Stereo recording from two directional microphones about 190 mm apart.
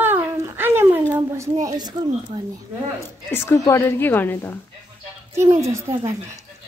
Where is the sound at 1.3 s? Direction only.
15° right (ahead or behind).